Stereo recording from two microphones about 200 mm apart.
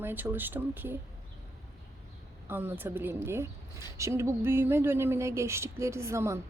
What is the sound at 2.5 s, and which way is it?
A woman's voice, 10° right (ahead or behind).